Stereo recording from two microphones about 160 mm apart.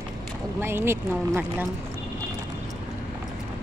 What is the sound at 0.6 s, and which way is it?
Speech, 15° right (ahead or behind).